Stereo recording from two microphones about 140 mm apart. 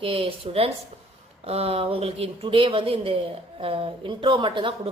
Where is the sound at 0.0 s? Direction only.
40° right (ahead or behind).